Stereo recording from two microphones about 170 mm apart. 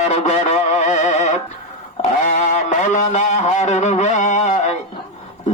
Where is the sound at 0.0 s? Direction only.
40° left (ahead or behind).